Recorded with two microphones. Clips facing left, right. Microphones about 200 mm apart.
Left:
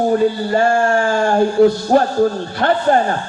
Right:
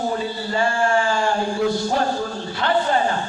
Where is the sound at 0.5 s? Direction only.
50° left (ahead or behind).